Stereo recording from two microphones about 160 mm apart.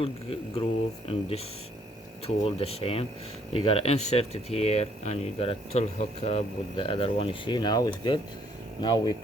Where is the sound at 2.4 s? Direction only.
40° left (ahead or behind).